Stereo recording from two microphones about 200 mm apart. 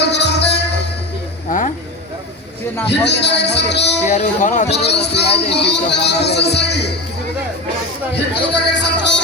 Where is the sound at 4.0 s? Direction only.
35° left (ahead or behind).